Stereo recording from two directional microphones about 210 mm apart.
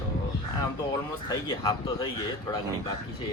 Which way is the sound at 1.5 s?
20° left (ahead or behind).